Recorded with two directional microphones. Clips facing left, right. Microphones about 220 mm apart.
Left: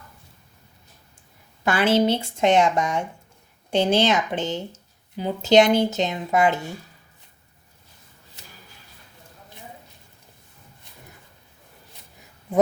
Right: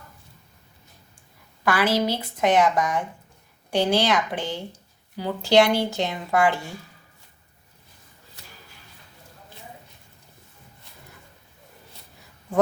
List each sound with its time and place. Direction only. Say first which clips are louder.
1.6 s a woman's voice: left 3 dB; 25° left (ahead or behind)